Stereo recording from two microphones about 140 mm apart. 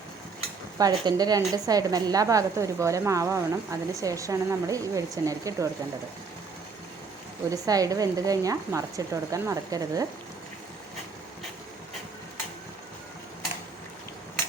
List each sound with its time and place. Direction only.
0.8 s a woman's voice: 25° right (ahead or behind)
7.5 s a woman's voice: 25° right (ahead or behind)